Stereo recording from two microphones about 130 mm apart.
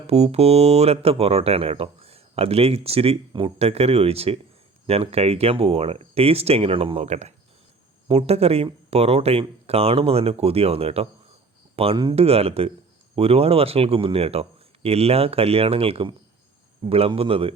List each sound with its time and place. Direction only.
0.1 s speech: 50° right (ahead or behind)